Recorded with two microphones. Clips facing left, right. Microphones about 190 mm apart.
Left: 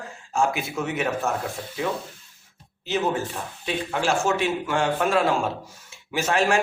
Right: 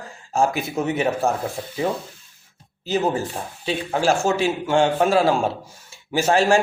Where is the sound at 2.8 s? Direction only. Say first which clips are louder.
Right 3 dB; 35° right (ahead or behind).